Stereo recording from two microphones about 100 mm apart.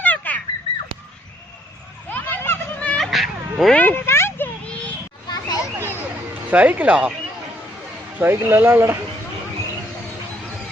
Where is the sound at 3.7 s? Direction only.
20° left (ahead or behind).